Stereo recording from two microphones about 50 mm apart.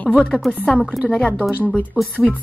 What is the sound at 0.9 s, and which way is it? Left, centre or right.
Speech, centre.